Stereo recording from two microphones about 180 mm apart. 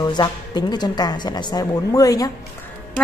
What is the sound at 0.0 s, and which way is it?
A woman's voice, 25° left (ahead or behind).